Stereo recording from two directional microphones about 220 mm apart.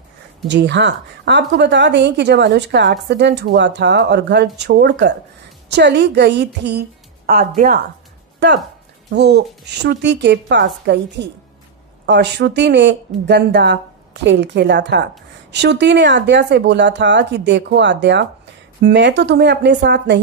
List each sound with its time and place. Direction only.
0.5 s speech: 55° right (ahead or behind)
8.4 s speech: 50° right (ahead or behind)